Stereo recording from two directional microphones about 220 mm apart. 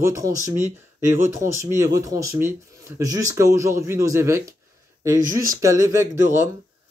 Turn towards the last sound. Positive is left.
turn(degrees=-15)  # may be behind; listen again after turning